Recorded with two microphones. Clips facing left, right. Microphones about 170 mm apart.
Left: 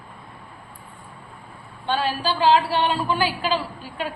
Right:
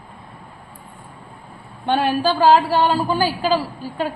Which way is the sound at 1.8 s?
55° right (ahead or behind).